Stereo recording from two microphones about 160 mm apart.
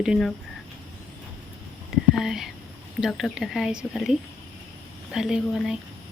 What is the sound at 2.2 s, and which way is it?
Speech, centre (ahead or behind).